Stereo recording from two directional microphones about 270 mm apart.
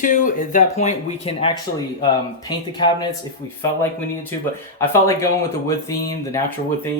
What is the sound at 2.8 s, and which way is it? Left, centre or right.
Speech, centre.